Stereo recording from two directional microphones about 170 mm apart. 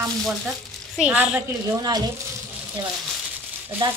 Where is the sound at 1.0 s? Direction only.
5° right (ahead or behind).